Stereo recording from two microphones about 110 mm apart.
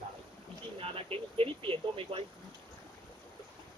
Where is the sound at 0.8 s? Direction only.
60° right (ahead or behind).